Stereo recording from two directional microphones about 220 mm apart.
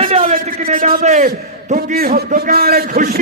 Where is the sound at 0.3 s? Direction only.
35° right (ahead or behind).